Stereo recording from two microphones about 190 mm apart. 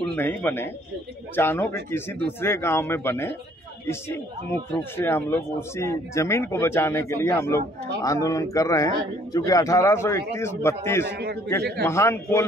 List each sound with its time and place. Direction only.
0.1 s speech: 10° left (ahead or behind)